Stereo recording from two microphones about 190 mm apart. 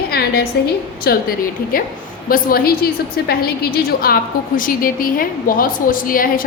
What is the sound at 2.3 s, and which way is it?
A woman's voice, 50° left (ahead or behind).